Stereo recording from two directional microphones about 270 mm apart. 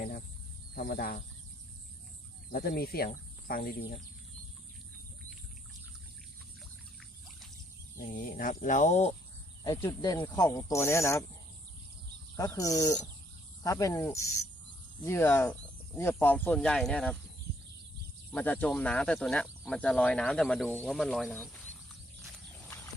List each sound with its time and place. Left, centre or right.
0.8 s speech: left
2.5 s speech: left
7.9 s speech: left
9.6 s speech: centre
12.4 s speech: centre
18.3 s speech: centre